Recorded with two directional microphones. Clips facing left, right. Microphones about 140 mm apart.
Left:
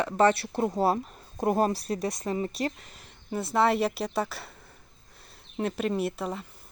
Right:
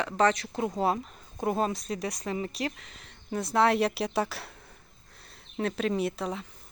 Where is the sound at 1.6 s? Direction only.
40° left (ahead or behind).